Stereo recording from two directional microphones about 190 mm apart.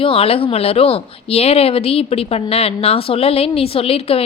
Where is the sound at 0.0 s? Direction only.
30° left (ahead or behind).